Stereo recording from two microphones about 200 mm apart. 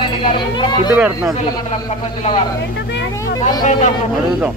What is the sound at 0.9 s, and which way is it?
Speech, 5° right (ahead or behind).